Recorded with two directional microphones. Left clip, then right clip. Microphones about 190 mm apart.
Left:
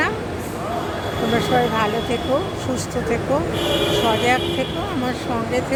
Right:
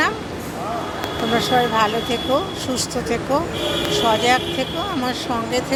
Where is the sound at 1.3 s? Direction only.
Centre (ahead or behind).